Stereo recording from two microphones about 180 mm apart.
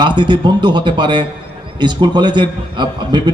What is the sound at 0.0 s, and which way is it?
A man's voice, 25° right (ahead or behind).